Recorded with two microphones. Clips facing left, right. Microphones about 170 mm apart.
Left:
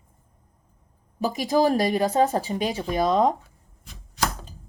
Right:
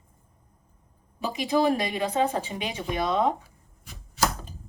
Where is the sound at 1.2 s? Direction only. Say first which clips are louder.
Left 3 dB; 40° left (ahead or behind).